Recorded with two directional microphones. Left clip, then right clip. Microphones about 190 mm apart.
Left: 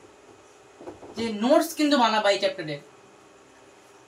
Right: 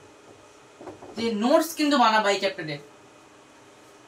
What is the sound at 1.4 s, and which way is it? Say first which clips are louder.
Speech: left 1 dB; 15° right (ahead or behind).